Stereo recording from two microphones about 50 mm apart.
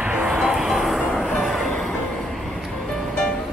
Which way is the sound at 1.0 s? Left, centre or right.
Centre.